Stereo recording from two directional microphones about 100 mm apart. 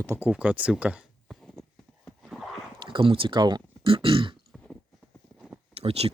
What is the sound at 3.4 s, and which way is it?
Speech, 45° right (ahead or behind).